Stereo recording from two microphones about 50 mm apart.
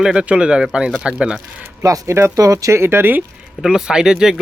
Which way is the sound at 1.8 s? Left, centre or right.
Right.